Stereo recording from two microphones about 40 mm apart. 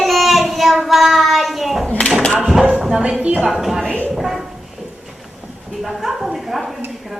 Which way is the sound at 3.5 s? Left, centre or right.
Centre.